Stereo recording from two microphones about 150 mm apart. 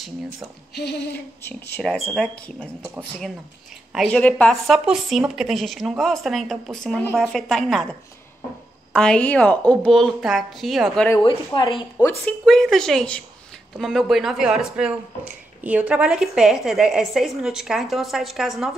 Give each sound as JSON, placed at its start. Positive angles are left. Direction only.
{"t": 1.8, "sound": "a woman's voice", "side_deg": 5}
{"t": 3.9, "sound": "a woman's voice", "side_deg": 0}
{"t": 8.9, "sound": "a woman's voice", "side_deg": 5}
{"t": 11.2, "sound": "a woman's voice", "side_deg": 30}
{"t": 12.0, "sound": "a woman's voice", "side_deg": 15}
{"t": 12.4, "sound": "speech", "side_deg": 0}